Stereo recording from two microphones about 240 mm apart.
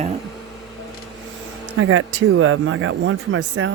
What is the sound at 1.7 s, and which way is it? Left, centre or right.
Speech, right.